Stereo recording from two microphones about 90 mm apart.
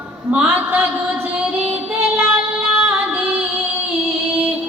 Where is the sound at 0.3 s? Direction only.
20° right (ahead or behind).